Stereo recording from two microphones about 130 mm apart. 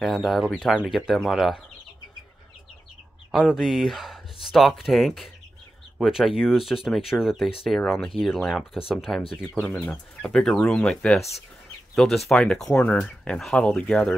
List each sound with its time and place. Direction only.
0.0 s speech: centre (ahead or behind)
3.3 s speech: 5° right (ahead or behind)
9.6 s speech: 10° left (ahead or behind)